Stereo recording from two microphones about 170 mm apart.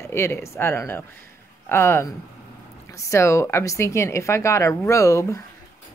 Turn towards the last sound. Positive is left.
turn(degrees=20)  # may be behind; listen again after turning